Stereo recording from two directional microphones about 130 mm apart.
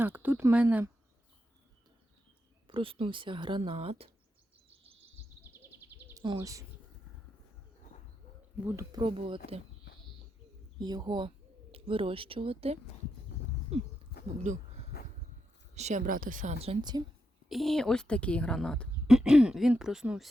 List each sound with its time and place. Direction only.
0.0 s speech: 15° right (ahead or behind)
2.6 s speech: 40° right (ahead or behind)
5.4 s a sound: 15° right (ahead or behind)
6.4 s speech: 25° right (ahead or behind)
8.6 s speech: 25° right (ahead or behind); by 9.6 s 45° right (ahead or behind)
10.8 s speech: 30° right (ahead or behind)
11.7 s speech: 45° right (ahead or behind)
14.5 s speech: 70° right (ahead or behind)
15.7 s speech: 60° right (ahead or behind); by 16.6 s 90° right
16.9 s speech: 30° right (ahead or behind)
17.5 s a woman's voice: centre (ahead or behind)